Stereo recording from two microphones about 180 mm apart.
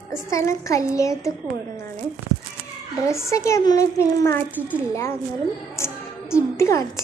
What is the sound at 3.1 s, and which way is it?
A child's voice, 15° left (ahead or behind).